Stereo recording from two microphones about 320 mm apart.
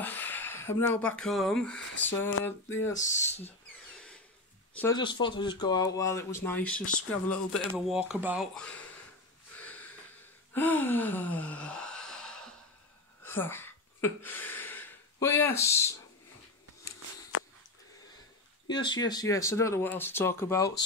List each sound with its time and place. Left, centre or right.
0.0 s speech: centre
4.7 s speech: centre
6.8 s speech: left
7.1 s speech: centre
10.5 s gasp: centre
13.2 s a sound: centre
18.7 s speech: centre